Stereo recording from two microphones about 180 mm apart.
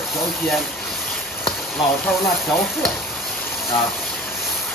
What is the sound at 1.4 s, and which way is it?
Speech, centre (ahead or behind).